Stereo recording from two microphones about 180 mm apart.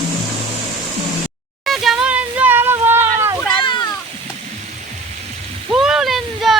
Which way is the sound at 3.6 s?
25° left (ahead or behind).